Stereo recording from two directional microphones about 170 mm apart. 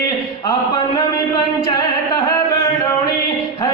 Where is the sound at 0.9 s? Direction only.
25° left (ahead or behind).